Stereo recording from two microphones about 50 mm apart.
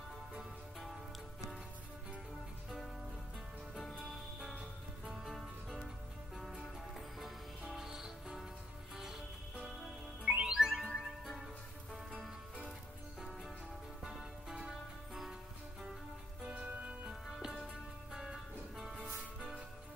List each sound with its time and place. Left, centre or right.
0.4 s music: centre
3.7 s music: centre
10.2 s music: right
10.5 s music: centre
13.2 s music: centre
14.0 s music: centre
16.5 s music: right
17.0 s music: centre